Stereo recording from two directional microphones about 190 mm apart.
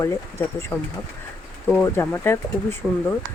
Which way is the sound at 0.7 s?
10° left (ahead or behind).